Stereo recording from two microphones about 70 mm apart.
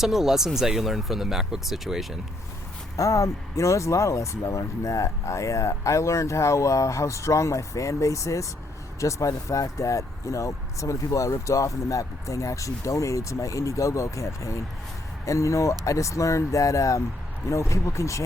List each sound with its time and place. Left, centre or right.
0.0 s speech: centre
2.9 s speech: left